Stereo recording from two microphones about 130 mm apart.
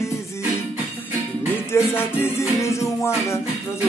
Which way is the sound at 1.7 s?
20° left (ahead or behind).